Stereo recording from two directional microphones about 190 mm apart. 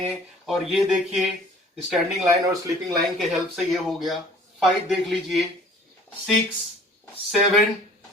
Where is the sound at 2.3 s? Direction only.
15° right (ahead or behind).